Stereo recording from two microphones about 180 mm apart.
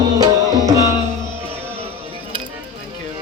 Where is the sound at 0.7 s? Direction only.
20° right (ahead or behind).